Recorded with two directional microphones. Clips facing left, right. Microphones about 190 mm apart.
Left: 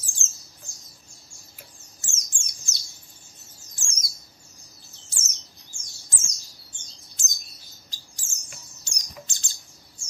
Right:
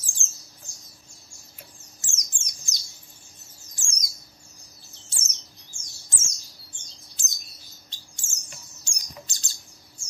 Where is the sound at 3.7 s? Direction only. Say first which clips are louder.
Even; 15° right (ahead or behind).